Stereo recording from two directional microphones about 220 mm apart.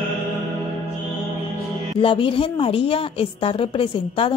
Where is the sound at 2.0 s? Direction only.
25° left (ahead or behind).